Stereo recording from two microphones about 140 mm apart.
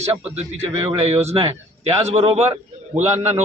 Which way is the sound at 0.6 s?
40° right (ahead or behind).